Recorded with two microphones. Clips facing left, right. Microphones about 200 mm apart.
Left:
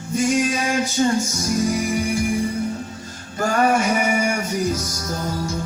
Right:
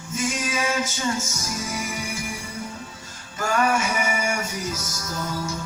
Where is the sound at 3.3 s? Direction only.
40° left (ahead or behind).